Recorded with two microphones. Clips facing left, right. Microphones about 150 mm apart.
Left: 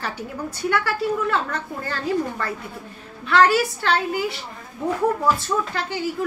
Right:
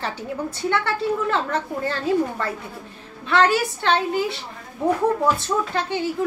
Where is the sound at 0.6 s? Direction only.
25° right (ahead or behind).